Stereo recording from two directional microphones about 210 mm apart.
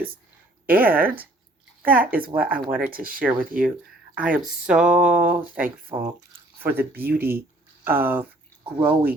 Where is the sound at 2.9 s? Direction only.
45° right (ahead or behind).